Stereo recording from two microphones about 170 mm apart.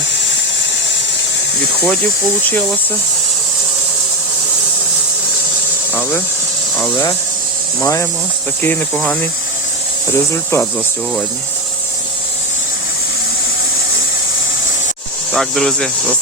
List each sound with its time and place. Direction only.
5.9 s a sound: 10° left (ahead or behind)
6.9 s speech: 25° left (ahead or behind)
15.3 s speech: 5° left (ahead or behind)